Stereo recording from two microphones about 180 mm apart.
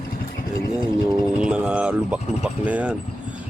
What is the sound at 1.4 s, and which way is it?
Speech, 5° right (ahead or behind).